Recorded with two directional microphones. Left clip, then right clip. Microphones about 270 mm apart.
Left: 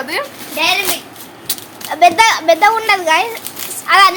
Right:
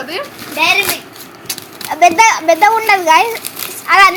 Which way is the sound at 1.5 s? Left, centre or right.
Centre.